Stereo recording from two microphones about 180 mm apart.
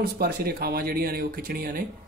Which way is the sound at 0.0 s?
60° right (ahead or behind).